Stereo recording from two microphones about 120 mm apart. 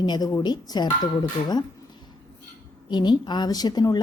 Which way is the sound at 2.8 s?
40° left (ahead or behind).